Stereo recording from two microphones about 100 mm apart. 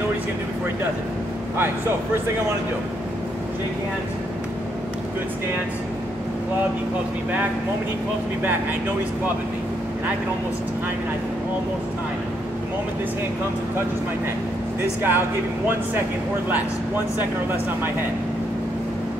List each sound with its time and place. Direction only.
15.0 s speech: 20° right (ahead or behind)
16.4 s speech: 20° right (ahead or behind)